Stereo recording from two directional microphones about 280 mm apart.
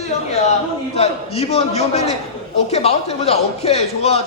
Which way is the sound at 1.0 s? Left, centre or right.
Left.